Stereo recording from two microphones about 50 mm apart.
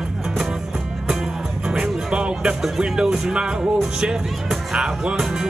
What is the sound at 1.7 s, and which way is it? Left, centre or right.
Music, centre.